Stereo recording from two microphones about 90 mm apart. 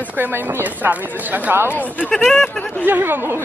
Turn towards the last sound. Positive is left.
turn(degrees=-25)  # may be behind; listen again after turning